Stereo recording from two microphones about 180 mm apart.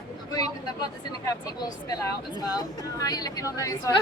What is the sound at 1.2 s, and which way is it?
Speech, 20° left (ahead or behind).